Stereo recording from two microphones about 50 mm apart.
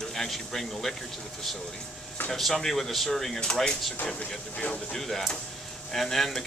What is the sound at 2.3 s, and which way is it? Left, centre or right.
Speech, centre.